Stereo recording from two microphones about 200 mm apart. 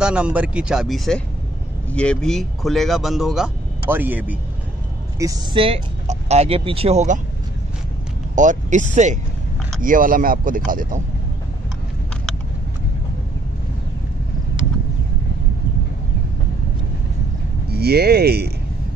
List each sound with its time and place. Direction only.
0.0 s speech: 5° right (ahead or behind)
5.2 s speech: 20° right (ahead or behind)
8.4 s speech: 40° right (ahead or behind)
17.6 s speech: 55° right (ahead or behind)